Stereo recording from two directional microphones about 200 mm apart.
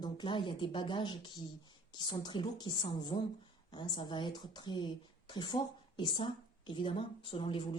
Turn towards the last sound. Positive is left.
turn(degrees=25)  # may be behind; listen again after turning